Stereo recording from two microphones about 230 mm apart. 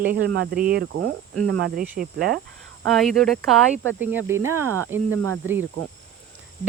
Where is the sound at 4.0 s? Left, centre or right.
Centre.